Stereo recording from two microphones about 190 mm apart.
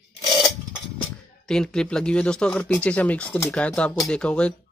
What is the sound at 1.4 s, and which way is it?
Speech, 5° left (ahead or behind).